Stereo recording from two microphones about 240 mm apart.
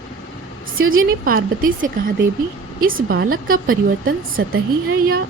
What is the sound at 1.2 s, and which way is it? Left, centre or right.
A woman's voice, right.